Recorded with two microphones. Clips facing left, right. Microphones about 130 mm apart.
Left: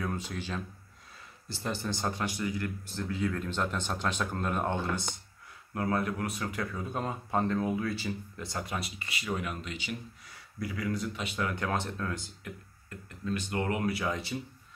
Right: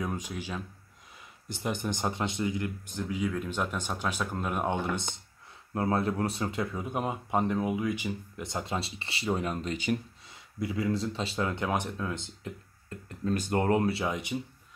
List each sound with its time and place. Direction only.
0.0 s speech: 15° right (ahead or behind); by 9.9 s 45° right (ahead or behind)
10.2 s speech: 25° right (ahead or behind)
13.2 s speech: 40° right (ahead or behind); by 14.4 s 15° right (ahead or behind)